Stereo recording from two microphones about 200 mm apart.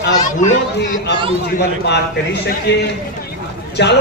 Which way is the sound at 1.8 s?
55° left (ahead or behind).